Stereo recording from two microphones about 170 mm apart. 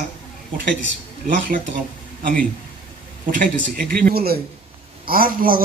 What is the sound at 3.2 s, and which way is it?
A man's voice, 55° right (ahead or behind).